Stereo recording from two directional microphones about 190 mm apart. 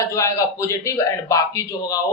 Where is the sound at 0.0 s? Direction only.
15° left (ahead or behind).